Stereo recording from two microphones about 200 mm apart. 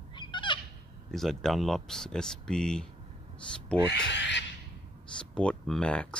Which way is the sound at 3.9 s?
60° left (ahead or behind).